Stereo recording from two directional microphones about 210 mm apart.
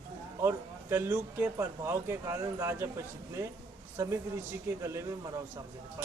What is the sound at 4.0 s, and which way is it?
Speech, 15° right (ahead or behind).